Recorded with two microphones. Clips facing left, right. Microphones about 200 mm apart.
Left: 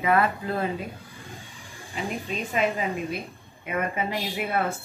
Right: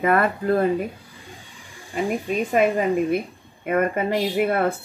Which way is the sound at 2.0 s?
50° right (ahead or behind).